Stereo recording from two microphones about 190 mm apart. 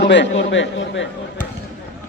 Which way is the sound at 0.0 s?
70° left (ahead or behind).